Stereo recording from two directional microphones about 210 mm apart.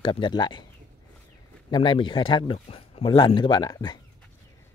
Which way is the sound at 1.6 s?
20° left (ahead or behind).